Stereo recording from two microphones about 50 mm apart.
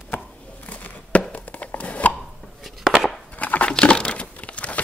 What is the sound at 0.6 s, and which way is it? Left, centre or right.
Chopping, left.